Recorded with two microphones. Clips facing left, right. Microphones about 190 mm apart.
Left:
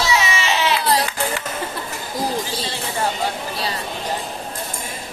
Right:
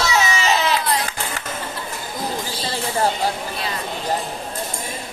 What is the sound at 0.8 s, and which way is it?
Sheep, 35° left (ahead or behind).